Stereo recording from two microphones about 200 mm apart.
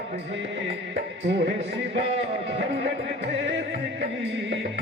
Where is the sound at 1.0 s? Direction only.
55° right (ahead or behind).